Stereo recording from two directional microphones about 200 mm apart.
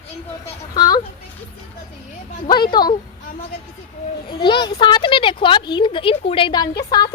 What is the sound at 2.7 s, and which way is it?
Speech, 20° left (ahead or behind).